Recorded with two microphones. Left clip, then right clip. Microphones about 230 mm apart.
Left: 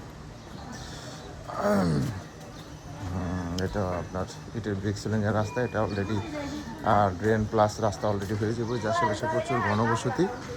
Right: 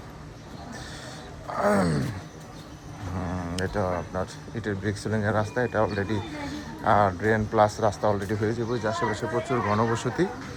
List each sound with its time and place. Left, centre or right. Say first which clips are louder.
1.5 s roaring cats: right 3 dB; centre
3.3 s speech: right 2 dB; centre
6.1 s speech: right 1 dB; centre
8.2 s speech: right 3 dB; centre
8.9 s speech: left 4 dB; centre
9.3 s speech: right 1 dB; centre
9.9 s speech: even; centre